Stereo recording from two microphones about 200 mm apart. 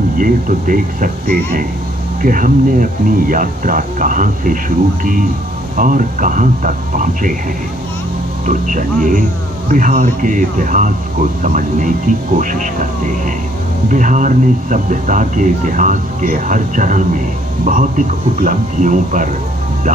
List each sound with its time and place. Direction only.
0.2 s speech: 40° right (ahead or behind)
8.5 s speech: 40° right (ahead or behind)
13.8 s speech: 40° right (ahead or behind)